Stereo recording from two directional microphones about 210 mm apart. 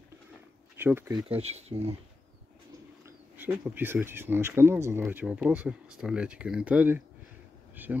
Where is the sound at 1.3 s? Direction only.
30° right (ahead or behind).